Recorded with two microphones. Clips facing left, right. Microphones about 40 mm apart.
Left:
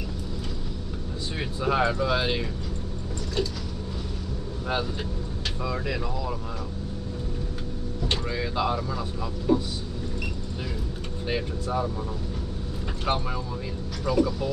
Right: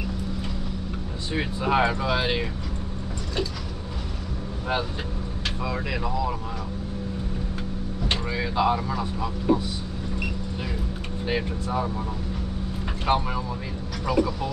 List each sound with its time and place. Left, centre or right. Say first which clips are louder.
1.3 s speech: right 3 dB; right
5.6 s speech: even; centre
8.1 s speech: right 2 dB; centre
13.0 s speech: right 4 dB; centre